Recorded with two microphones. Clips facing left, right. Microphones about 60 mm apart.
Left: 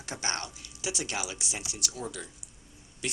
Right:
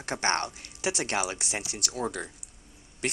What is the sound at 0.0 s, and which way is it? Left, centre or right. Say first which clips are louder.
Speech: right 7 dB; right.